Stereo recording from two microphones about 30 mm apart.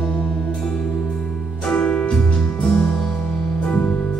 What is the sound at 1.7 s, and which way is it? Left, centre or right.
Music, left.